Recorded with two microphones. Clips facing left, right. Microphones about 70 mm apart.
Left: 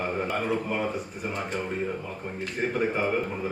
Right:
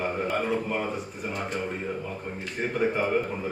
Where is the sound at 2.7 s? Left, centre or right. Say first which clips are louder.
Right 2 dB; centre.